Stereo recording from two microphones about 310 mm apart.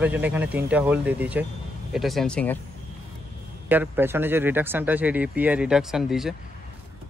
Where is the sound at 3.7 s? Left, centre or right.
Centre.